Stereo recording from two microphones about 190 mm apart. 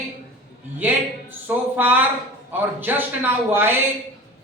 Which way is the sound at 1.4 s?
10° right (ahead or behind).